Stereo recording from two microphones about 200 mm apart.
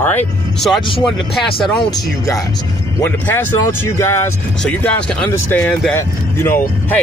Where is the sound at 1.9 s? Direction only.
15° left (ahead or behind).